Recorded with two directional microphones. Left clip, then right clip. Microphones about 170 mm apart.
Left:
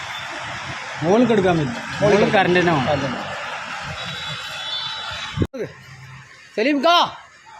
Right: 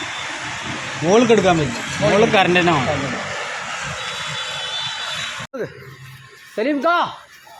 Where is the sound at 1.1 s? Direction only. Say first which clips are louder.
Right 3 dB; 10° left (ahead or behind).